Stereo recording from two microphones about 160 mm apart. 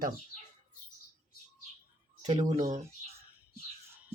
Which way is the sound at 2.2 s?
50° right (ahead or behind).